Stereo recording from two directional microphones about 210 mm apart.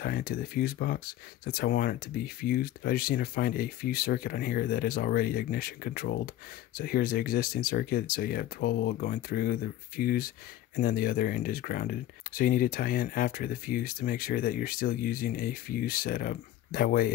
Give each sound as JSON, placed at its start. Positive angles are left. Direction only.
{"t": 0.0, "sound": "speech", "side_deg": 45}